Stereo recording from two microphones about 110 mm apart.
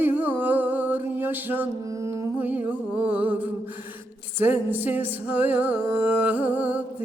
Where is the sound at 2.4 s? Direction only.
15° right (ahead or behind).